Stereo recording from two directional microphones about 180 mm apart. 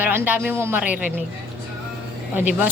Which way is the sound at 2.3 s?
10° right (ahead or behind).